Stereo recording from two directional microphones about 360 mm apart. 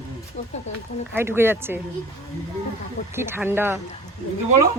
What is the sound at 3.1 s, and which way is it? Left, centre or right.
Speech, centre.